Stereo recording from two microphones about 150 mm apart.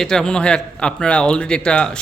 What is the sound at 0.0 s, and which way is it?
A man's voice, 5° left (ahead or behind).